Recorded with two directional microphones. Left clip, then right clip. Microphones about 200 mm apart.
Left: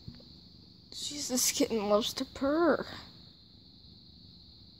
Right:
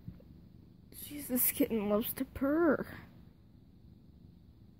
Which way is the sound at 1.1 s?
5° right (ahead or behind).